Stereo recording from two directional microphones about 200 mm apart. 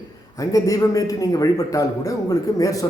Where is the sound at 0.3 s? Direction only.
15° left (ahead or behind).